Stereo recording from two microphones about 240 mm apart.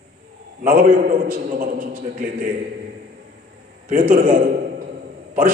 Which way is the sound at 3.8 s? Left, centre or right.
Right.